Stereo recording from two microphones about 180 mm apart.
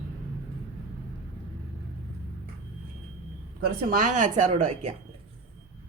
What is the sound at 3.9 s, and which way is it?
Speech, 45° right (ahead or behind).